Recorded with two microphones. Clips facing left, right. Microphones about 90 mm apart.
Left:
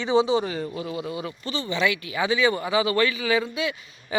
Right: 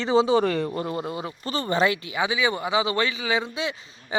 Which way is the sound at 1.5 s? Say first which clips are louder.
Right 3 dB; 45° right (ahead or behind).